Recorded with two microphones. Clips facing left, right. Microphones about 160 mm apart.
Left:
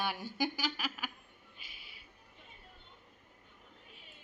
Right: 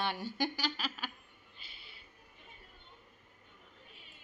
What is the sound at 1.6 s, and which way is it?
Music, 10° left (ahead or behind).